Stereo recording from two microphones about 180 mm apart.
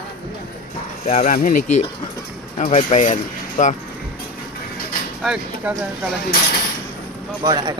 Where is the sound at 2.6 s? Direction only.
40° left (ahead or behind).